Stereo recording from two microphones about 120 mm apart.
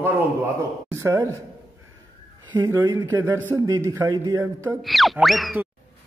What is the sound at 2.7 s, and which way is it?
Speech, 30° right (ahead or behind).